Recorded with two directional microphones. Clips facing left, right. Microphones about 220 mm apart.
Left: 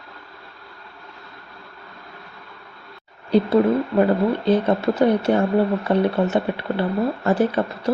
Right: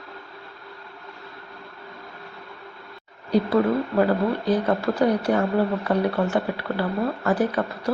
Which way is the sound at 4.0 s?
25° left (ahead or behind).